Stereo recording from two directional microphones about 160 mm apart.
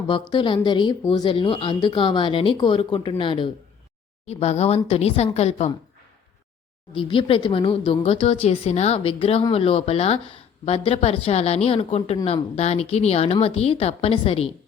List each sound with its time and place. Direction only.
0.1 s a woman's voice: 30° left (ahead or behind)
6.9 s speech: 35° left (ahead or behind)